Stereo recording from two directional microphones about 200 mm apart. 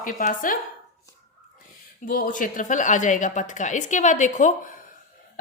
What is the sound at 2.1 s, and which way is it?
A woman's voice, 40° left (ahead or behind).